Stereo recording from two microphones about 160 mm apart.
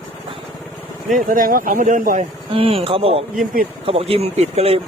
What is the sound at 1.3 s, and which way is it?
Speech, 60° right (ahead or behind).